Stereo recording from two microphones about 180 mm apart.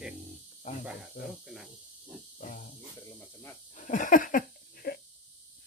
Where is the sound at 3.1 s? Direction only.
10° left (ahead or behind).